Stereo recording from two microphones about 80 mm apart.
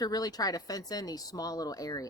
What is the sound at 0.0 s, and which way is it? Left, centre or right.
Speech, left.